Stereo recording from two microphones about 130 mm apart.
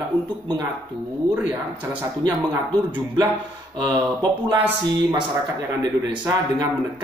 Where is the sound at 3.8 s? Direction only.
35° right (ahead or behind).